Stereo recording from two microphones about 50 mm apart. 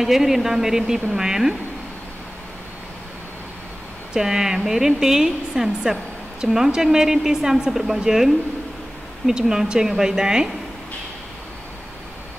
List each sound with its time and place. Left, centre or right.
0.0 s a woman's voice: centre
4.1 s a woman's voice: centre